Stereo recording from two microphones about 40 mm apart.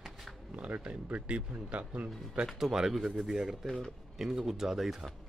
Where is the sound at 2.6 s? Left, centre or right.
Centre.